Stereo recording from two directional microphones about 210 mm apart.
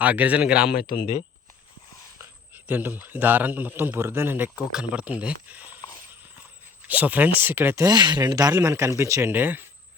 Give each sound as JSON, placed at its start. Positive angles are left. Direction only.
{"t": 0.0, "sound": "a man's voice", "side_deg": -5}
{"t": 0.8, "sound": "speech", "side_deg": 40}
{"t": 2.6, "sound": "a man's voice", "side_deg": -10}
{"t": 6.8, "sound": "a man's voice", "side_deg": -5}